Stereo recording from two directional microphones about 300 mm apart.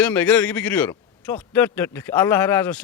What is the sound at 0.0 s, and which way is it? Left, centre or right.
A man's voice, centre.